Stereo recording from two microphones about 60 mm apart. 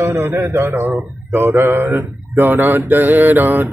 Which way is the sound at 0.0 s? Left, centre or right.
Right.